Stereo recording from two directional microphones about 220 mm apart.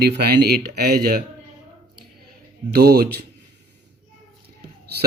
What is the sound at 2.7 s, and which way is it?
Speech, 45° right (ahead or behind).